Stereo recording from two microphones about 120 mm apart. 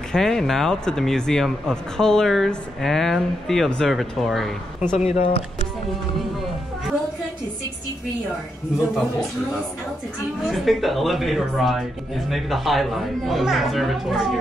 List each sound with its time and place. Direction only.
0.1 s speech: 5° left (ahead or behind)
4.9 s speech: 60° left (ahead or behind)
10.5 s speech: centre (ahead or behind)